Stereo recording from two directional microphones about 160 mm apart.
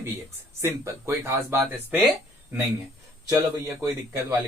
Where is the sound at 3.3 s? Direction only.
20° right (ahead or behind).